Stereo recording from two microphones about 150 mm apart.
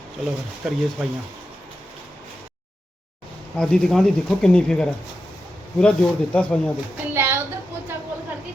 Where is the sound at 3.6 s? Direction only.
5° left (ahead or behind).